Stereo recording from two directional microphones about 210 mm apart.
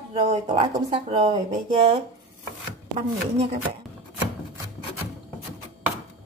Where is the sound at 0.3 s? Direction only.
35° right (ahead or behind).